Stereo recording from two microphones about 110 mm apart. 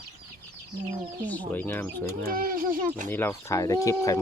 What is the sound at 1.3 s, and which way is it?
Speech, 15° left (ahead or behind).